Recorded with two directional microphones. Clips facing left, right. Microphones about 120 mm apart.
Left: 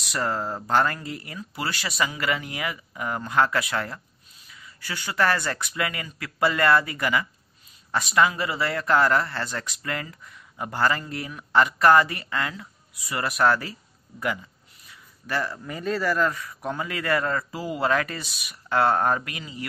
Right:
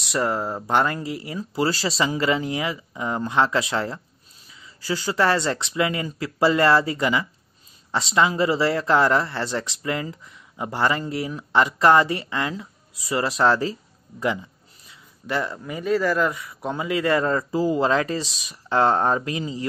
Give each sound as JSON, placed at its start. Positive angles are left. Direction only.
{"t": 0.1, "sound": "speech", "side_deg": -20}
{"t": 14.9, "sound": "speech", "side_deg": -20}